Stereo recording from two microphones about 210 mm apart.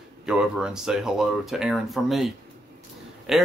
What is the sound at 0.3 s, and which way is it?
A man's voice, 5° right (ahead or behind).